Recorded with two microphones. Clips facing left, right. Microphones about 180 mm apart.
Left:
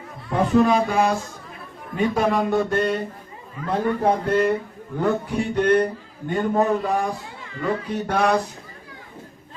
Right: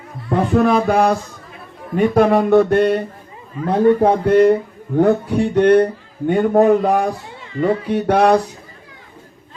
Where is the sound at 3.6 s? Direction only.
30° right (ahead or behind).